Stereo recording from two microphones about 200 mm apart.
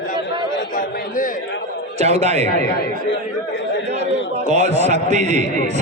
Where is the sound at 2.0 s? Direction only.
35° right (ahead or behind).